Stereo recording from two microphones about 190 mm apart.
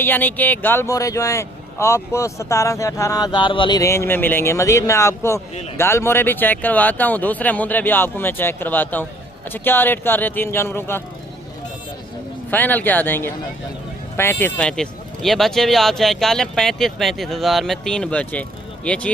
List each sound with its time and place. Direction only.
0.0 s speech: 10° left (ahead or behind)
12.5 s speech: 10° left (ahead or behind)